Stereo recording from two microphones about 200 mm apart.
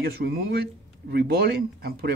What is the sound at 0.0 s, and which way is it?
Speech, 50° right (ahead or behind).